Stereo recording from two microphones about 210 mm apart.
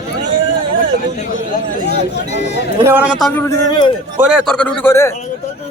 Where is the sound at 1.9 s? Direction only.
55° left (ahead or behind).